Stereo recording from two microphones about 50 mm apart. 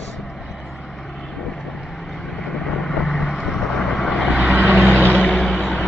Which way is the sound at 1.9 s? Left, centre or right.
Centre.